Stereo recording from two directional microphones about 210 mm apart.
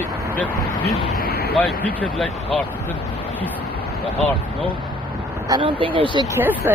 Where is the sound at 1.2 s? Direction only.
50° left (ahead or behind).